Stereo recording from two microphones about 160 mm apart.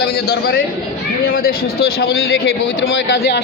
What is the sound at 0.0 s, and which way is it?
Speech, 75° left (ahead or behind).